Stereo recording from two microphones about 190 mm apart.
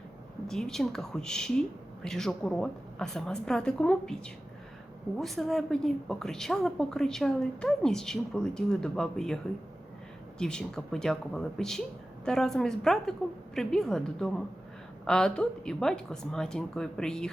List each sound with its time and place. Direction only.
0.4 s a woman's voice: centre (ahead or behind)